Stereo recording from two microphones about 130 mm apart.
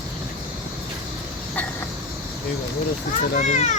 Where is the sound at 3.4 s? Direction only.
70° left (ahead or behind).